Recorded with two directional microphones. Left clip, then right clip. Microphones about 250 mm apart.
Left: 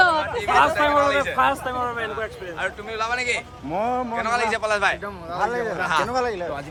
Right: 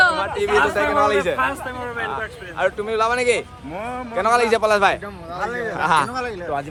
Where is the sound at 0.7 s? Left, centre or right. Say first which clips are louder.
Right 1 dB; centre.